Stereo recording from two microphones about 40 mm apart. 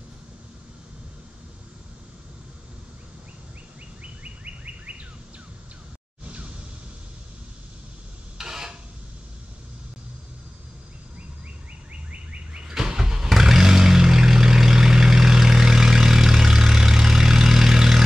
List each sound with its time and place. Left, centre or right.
4.0 s bird: right
6.2 s music: right
8.4 s a sound: centre
11.9 s bird: right
12.6 s vehicle: centre